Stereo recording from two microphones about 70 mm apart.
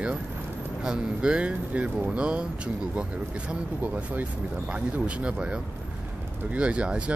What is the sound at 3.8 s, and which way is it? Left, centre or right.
Speech, right.